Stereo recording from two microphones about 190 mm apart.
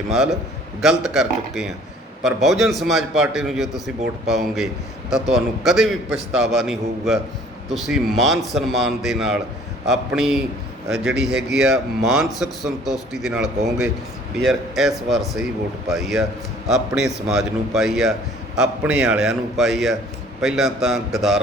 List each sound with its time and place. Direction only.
0.8 s speech: centre (ahead or behind)
17.0 s a man's voice: 65° right (ahead or behind)
17.2 s speech: centre (ahead or behind)